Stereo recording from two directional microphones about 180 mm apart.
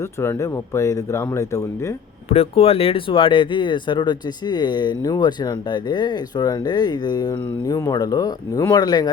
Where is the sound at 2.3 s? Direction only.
35° left (ahead or behind).